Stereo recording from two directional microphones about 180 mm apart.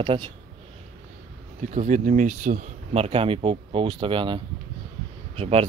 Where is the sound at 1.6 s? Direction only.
40° right (ahead or behind).